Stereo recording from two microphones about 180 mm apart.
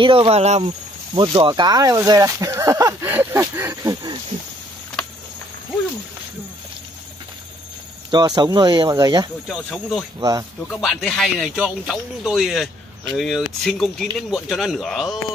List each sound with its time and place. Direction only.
0.0 s speech: 30° right (ahead or behind)
8.1 s speech: 25° right (ahead or behind)
9.5 s speech: centre (ahead or behind)